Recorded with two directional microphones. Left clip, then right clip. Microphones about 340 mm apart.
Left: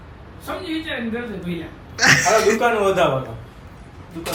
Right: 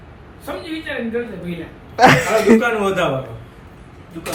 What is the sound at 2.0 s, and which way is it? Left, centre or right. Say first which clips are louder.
Speech: right 3 dB; centre.